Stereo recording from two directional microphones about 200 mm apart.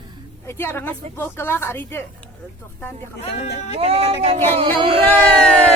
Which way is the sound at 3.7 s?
30° right (ahead or behind).